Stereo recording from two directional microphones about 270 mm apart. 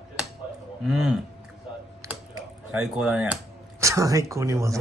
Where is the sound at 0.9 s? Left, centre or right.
Centre.